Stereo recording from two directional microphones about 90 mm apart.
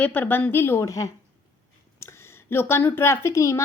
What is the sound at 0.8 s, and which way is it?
Speech, 40° left (ahead or behind).